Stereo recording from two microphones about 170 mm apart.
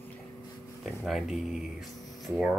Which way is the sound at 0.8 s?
Centre (ahead or behind).